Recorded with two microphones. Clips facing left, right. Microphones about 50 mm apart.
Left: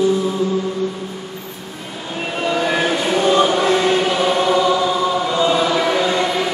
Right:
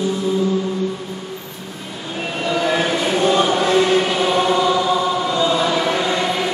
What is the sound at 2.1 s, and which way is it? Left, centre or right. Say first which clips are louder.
Vehicle: left 1 dB; centre.